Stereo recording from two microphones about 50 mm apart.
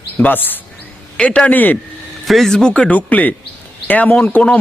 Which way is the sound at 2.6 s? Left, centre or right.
Centre.